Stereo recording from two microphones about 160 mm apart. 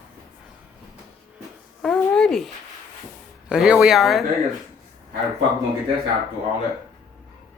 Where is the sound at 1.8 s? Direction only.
5° left (ahead or behind).